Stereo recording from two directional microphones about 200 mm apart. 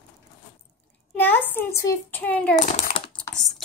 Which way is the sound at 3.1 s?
Centre (ahead or behind).